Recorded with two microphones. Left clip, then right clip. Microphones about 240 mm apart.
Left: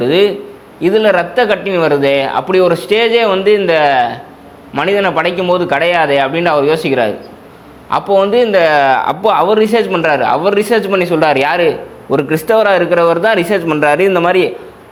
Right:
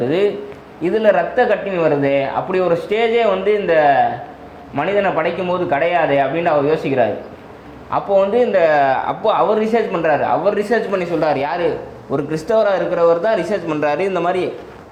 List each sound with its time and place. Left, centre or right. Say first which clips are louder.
0.0 s a man's voice: left 6 dB; left